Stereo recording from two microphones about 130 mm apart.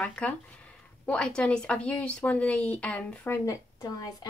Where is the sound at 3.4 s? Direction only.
25° left (ahead or behind).